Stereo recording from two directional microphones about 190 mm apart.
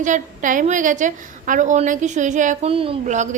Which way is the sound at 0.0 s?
40° right (ahead or behind).